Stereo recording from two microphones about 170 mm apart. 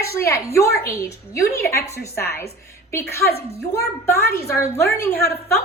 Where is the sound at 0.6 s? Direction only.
15° left (ahead or behind).